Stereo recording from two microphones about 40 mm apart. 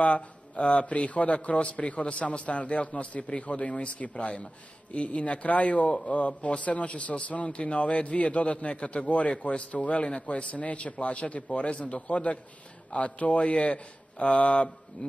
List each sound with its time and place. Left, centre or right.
0.0 s a man's voice: left